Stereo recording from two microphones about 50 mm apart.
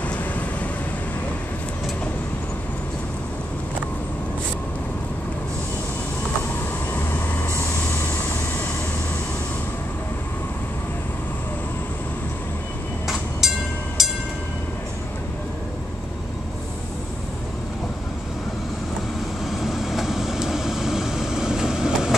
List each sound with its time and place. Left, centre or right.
0.0 s vehicle: left
6.9 s vehicle: left
13.4 s train: centre
19.4 s vehicle: centre